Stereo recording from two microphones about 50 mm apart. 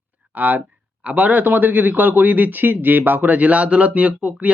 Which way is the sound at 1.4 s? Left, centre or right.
Right.